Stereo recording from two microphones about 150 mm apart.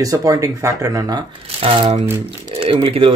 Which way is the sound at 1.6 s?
35° right (ahead or behind).